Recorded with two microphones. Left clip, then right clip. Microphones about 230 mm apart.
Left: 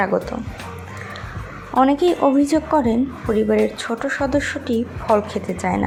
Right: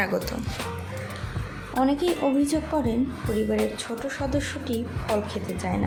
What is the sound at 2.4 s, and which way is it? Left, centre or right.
A woman's voice, centre.